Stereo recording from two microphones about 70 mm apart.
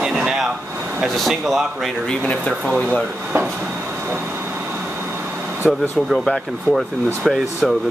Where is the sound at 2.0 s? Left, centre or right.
Centre.